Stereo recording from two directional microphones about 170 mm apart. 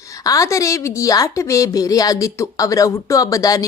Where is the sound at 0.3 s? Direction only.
20° left (ahead or behind).